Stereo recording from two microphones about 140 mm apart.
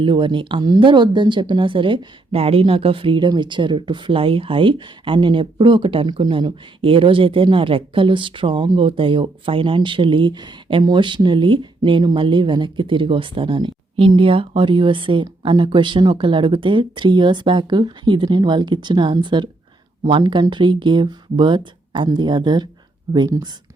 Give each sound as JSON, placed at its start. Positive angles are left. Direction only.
{"t": 0.0, "sound": "speech", "side_deg": -35}